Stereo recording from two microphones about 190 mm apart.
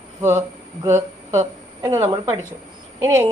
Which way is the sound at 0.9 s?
15° right (ahead or behind).